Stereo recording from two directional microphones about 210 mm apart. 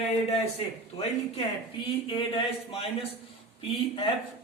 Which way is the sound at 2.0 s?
25° left (ahead or behind).